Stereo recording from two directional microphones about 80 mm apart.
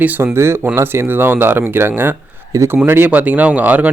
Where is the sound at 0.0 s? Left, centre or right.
Right.